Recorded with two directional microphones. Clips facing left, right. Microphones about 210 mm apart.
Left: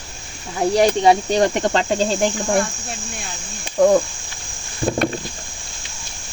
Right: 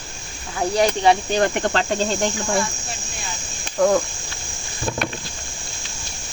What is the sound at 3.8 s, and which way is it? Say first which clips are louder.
Speech: left 3 dB; 15° left (ahead or behind).